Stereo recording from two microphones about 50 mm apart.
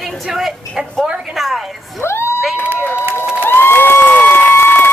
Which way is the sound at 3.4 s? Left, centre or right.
Left.